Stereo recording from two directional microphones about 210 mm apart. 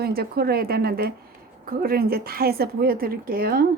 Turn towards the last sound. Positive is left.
turn(degrees=-45)  # may be behind; listen again after turning